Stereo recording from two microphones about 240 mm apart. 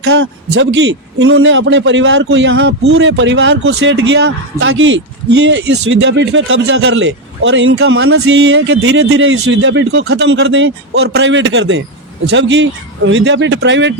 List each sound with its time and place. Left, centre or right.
0.2 s a man's voice: right